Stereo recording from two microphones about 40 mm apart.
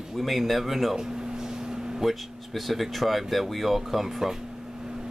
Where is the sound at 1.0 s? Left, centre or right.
Centre.